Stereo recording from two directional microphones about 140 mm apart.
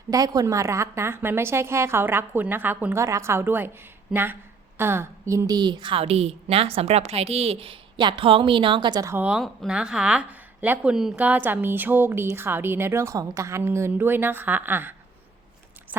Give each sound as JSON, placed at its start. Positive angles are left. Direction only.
{"t": 0.1, "sound": "a woman's voice", "side_deg": -25}
{"t": 9.1, "sound": "speech", "side_deg": -5}